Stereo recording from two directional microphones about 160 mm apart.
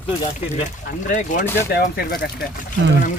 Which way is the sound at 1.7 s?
70° left (ahead or behind).